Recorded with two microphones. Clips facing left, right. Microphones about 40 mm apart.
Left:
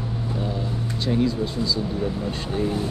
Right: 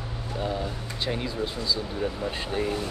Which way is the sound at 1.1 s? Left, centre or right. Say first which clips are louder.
Left 7 dB; centre.